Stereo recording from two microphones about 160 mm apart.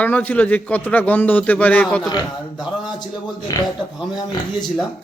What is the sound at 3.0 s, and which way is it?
Speech, 25° left (ahead or behind).